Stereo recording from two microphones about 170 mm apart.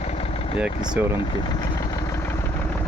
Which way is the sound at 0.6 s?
5° right (ahead or behind).